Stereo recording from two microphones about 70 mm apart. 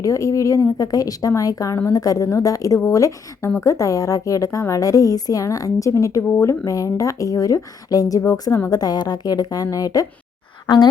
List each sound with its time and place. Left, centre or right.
0.0 s a woman's voice: left
8.2 s a woman's voice: left
8.7 s a woman's voice: left